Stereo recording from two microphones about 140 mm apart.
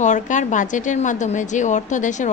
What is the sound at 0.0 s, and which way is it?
A woman's voice, 60° left (ahead or behind).